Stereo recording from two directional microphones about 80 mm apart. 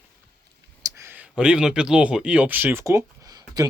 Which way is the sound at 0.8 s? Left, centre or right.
Right.